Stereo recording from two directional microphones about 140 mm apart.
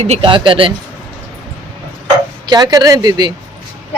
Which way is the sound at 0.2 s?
40° right (ahead or behind).